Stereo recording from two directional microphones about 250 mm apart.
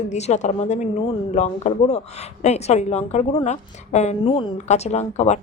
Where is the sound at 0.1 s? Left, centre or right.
Left.